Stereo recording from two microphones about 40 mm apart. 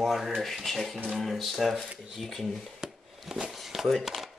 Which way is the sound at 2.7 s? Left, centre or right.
Centre.